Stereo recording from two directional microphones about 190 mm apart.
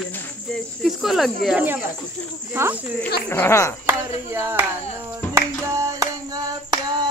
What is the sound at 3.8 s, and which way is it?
Speech, 10° right (ahead or behind).